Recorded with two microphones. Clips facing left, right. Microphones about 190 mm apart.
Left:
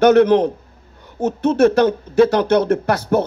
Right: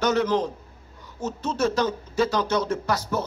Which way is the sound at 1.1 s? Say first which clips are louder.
Left 11 dB; 60° left (ahead or behind).